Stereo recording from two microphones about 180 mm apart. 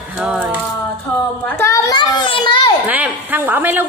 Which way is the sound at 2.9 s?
10° right (ahead or behind).